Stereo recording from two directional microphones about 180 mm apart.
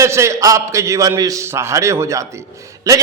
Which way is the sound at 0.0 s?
15° right (ahead or behind).